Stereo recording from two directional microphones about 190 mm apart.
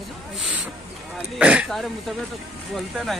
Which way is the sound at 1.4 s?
5° right (ahead or behind).